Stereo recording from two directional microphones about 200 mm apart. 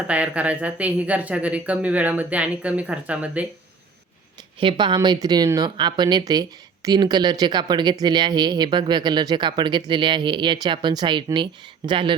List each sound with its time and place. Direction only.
0.1 s speech: 5° right (ahead or behind)
4.6 s speech: 25° right (ahead or behind)